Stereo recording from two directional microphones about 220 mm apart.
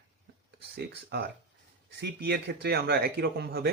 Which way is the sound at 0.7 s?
45° right (ahead or behind).